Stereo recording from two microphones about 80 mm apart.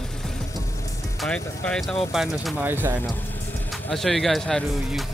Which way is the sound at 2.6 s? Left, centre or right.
Right.